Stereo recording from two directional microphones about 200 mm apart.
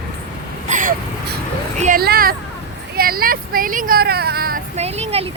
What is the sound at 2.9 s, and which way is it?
Speech, 45° right (ahead or behind).